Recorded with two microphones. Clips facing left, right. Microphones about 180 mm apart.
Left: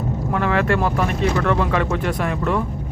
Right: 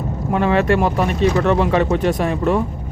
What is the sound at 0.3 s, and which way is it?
Speech, 20° right (ahead or behind).